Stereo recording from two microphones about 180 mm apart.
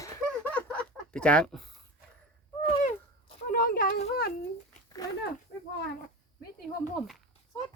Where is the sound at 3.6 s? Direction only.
55° left (ahead or behind).